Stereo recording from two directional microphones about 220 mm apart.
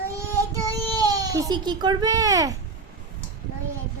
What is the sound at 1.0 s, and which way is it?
A child's voice, 15° right (ahead or behind).